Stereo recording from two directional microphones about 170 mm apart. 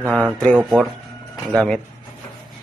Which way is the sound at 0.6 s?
5° right (ahead or behind).